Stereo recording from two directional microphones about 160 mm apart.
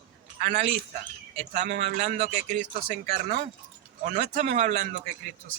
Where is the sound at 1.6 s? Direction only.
90° right.